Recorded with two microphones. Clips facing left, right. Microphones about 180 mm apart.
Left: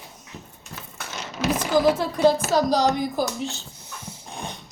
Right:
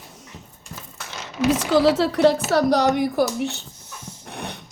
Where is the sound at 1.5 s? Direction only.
80° right; by 3.6 s 65° right (ahead or behind).